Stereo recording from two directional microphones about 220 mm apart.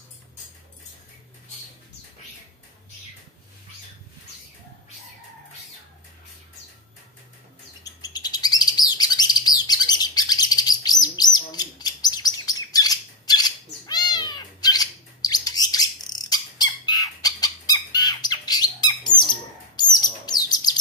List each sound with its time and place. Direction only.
7.8 s bird: 20° left (ahead or behind)